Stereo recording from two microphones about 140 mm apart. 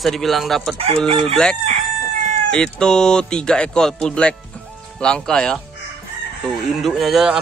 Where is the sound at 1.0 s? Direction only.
40° right (ahead or behind).